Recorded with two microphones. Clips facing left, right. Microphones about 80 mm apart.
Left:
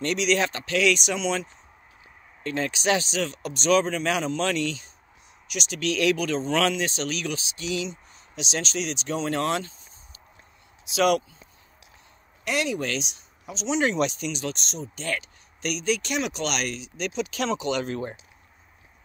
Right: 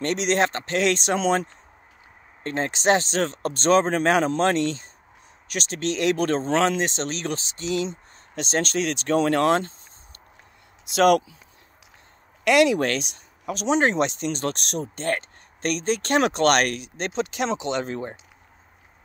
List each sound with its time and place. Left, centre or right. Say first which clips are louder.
0.0 s speech: right 2 dB; right
6.2 s speech: right 3 dB; right
8.4 s speech: right 5 dB; right
10.9 s speech: right 4 dB; right
12.4 s speech: right 9 dB; right
13.7 s speech: right 1 dB; right
15.0 s speech: right 3 dB; right
16.0 s speech: right 8 dB; right
16.9 s speech: right 2 dB; right